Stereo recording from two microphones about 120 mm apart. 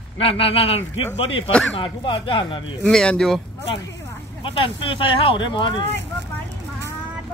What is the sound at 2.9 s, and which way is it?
Speech, 5° left (ahead or behind).